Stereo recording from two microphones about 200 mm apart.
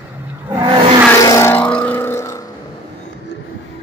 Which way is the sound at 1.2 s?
15° left (ahead or behind).